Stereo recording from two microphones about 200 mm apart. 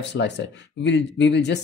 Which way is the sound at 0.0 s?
60° left (ahead or behind).